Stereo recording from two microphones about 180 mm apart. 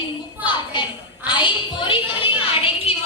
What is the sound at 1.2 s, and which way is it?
Speech, 25° left (ahead or behind).